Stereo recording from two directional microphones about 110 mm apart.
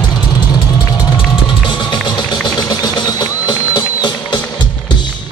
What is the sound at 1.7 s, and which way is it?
Music, 45° left (ahead or behind).